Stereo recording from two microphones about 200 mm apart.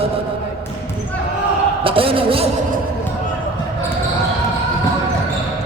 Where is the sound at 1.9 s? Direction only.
25° right (ahead or behind).